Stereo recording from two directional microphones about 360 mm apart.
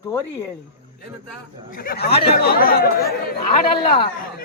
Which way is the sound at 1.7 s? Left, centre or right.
Left.